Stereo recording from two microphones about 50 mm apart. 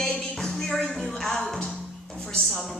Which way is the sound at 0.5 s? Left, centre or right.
Centre.